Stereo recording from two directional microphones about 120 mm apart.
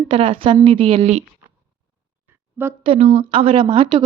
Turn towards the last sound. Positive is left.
turn(degrees=-40)  # may be behind; listen again after turning